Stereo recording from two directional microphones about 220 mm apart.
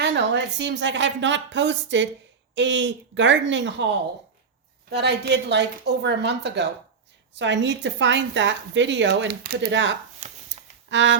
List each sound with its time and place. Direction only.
0.0 s a woman's voice: 55° right (ahead or behind)
4.9 s a woman's voice: 50° right (ahead or behind)
10.2 s shuffling cards: 35° right (ahead or behind)
10.8 s a sound: 55° right (ahead or behind)